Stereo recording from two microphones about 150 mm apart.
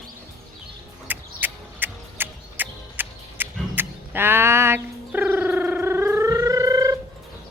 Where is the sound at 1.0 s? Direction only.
10° right (ahead or behind).